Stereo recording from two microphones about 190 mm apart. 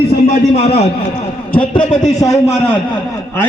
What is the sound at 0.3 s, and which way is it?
A man's voice, 30° left (ahead or behind).